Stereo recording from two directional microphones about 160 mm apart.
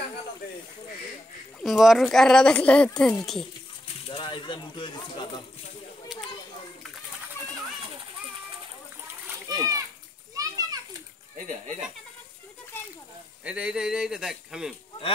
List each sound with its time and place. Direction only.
1.6 s speech: centre (ahead or behind)
3.8 s speech: 30° left (ahead or behind)
9.5 s a sound: 25° right (ahead or behind)
10.3 s children playing: 20° right (ahead or behind)
11.3 s speech: 50° right (ahead or behind)
12.7 s a sound: 15° left (ahead or behind)
13.4 s speech: 5° right (ahead or behind)